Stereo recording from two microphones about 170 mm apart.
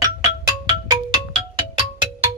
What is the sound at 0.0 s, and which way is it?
Music, 20° right (ahead or behind).